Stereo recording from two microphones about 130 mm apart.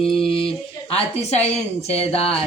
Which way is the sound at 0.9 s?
55° left (ahead or behind).